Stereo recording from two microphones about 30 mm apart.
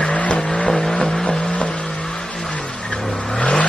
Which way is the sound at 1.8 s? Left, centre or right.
Centre.